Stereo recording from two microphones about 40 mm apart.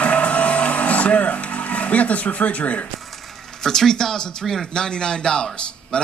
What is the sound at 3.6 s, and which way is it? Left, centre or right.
Speech, centre.